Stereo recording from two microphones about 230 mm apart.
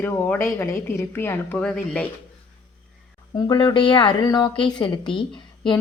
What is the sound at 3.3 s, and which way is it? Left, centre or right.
Speech, centre.